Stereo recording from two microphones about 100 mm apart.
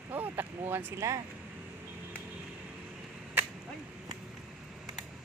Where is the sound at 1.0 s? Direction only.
30° right (ahead or behind).